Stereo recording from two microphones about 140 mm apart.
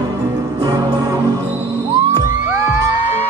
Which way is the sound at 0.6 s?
25° right (ahead or behind).